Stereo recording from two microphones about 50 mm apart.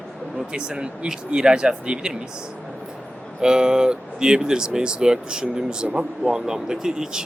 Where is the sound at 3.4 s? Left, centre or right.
Centre.